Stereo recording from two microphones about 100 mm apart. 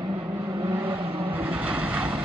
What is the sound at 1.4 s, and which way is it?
Vehicle, 10° right (ahead or behind).